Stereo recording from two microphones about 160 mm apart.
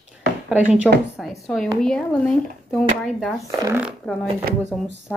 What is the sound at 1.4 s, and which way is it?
Speech, centre (ahead or behind).